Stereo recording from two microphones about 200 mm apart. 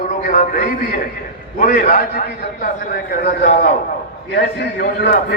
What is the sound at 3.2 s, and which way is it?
A man's voice, 55° left (ahead or behind).